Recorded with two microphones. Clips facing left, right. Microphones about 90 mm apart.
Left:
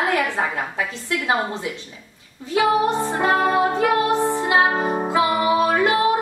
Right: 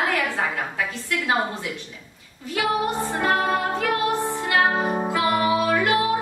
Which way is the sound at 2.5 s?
25° left (ahead or behind).